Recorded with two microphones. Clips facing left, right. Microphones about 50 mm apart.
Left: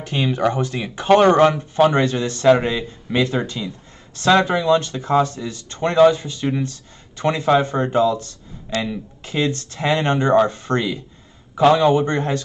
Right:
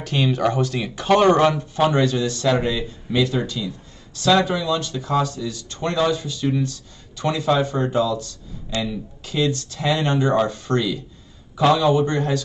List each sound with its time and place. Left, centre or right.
0.0 s speech: left